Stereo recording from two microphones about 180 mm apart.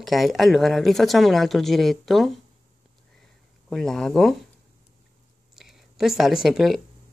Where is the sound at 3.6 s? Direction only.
Centre (ahead or behind).